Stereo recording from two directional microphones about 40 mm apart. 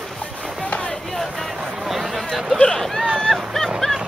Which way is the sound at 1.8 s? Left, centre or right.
Centre.